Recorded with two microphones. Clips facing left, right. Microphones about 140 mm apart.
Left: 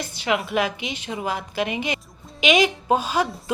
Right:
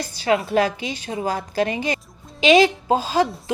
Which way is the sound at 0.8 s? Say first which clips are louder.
Right 2 dB; 20° left (ahead or behind).